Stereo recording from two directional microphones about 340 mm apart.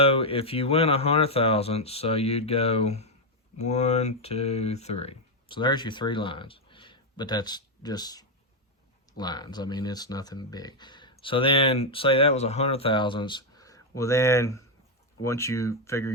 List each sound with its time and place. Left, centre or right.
0.0 s speech: centre